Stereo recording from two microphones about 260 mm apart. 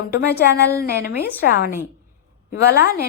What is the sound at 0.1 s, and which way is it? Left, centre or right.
Speech, left.